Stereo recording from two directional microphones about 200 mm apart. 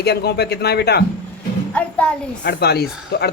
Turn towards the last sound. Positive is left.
turn(degrees=55)  # may be behind; listen again after turning